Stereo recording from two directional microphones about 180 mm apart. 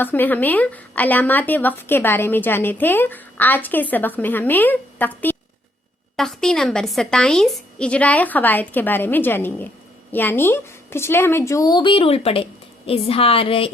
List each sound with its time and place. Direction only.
0.0 s a woman's voice: 10° left (ahead or behind); by 13.7 s 30° left (ahead or behind)